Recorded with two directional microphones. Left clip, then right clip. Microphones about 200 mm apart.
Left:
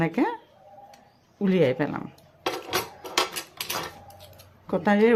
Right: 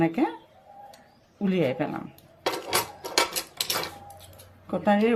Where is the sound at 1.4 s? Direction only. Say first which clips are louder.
Left 3 dB; 45° left (ahead or behind).